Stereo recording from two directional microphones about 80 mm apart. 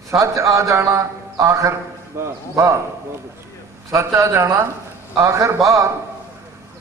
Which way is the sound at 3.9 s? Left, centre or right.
Right.